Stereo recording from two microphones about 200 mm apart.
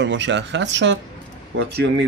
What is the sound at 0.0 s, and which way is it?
Speech, 65° right (ahead or behind).